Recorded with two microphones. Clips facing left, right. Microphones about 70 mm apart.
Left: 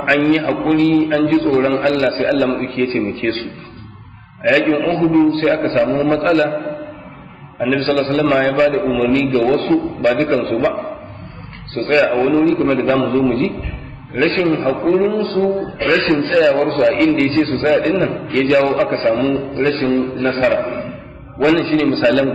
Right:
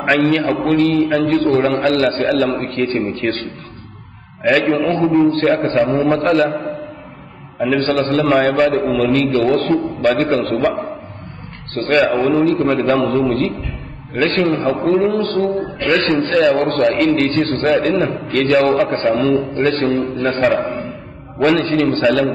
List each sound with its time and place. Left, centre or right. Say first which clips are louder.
0.0 s a man's voice: even; centre
4.5 s a man's voice: even; centre
9.3 s a man's voice: left 1 dB; centre
15.2 s a man's voice: left 1 dB; left
15.9 s a man's voice: left 1 dB; centre
21.4 s a man's voice: left 1 dB; centre